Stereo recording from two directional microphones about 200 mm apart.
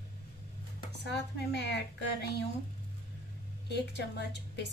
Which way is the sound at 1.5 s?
60° left (ahead or behind).